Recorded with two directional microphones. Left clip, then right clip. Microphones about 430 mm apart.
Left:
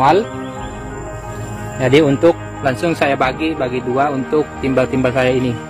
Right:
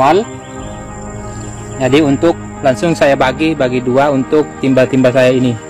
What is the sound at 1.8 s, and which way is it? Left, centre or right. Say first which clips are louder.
Speech: right 1 dB; centre.